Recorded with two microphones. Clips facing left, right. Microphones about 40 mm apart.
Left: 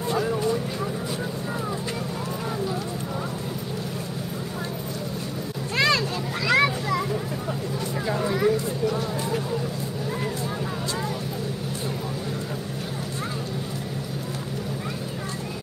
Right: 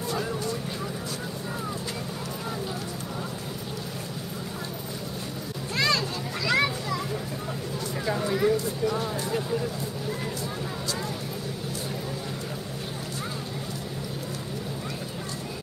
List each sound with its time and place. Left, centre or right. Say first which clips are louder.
0.2 s vehicle: left 6 dB; left
5.8 s children playing: left 4 dB; left
8.3 s a sound: left 1 dB; centre
8.8 s vehicle: left 2 dB; centre